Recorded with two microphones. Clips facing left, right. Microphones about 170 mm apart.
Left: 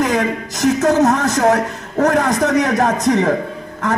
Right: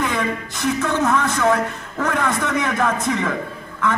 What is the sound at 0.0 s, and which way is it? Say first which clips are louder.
A man's voice: left 5 dB; 40° left (ahead or behind).